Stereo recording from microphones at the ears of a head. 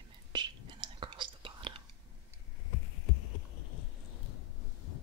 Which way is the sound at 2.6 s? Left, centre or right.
Left.